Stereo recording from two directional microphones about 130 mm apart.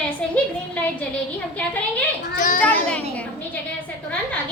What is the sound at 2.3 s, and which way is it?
Speech, 80° left.